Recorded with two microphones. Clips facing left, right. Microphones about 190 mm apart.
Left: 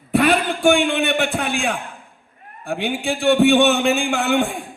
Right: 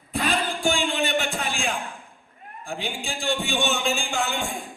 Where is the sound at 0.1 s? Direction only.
65° left (ahead or behind).